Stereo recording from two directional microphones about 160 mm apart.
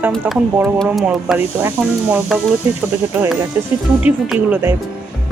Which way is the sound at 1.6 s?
10° right (ahead or behind).